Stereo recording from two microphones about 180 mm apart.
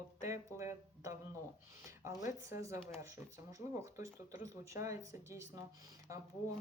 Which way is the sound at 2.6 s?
15° right (ahead or behind).